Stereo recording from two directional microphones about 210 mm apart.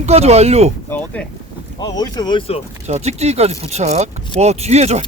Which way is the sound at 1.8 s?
20° left (ahead or behind).